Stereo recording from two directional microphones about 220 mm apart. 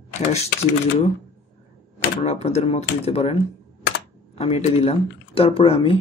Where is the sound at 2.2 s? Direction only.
30° left (ahead or behind).